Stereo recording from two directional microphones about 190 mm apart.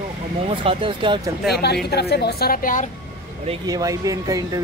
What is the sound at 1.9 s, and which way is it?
Speech, 60° left (ahead or behind).